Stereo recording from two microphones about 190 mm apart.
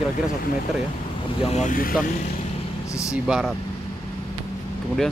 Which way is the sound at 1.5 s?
40° left (ahead or behind).